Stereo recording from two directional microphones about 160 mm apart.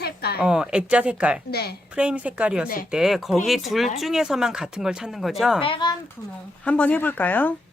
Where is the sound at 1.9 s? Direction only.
5° right (ahead or behind).